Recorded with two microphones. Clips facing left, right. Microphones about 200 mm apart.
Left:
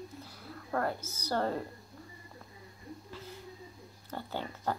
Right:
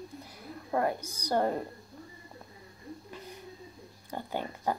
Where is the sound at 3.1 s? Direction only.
15° right (ahead or behind).